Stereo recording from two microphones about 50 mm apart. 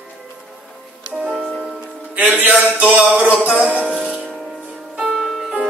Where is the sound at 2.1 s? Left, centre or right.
Right.